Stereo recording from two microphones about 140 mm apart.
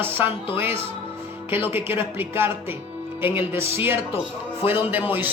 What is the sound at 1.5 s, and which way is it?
A woman's voice, 15° right (ahead or behind).